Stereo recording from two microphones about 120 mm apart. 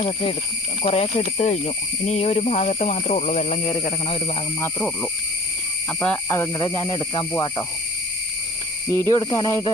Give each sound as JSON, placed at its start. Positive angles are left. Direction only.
{"t": 0.8, "sound": "speech", "side_deg": 55}
{"t": 3.6, "sound": "speech", "side_deg": 55}
{"t": 6.2, "sound": "speech", "side_deg": 20}
{"t": 6.7, "sound": "speech", "side_deg": 35}
{"t": 8.9, "sound": "speech", "side_deg": 20}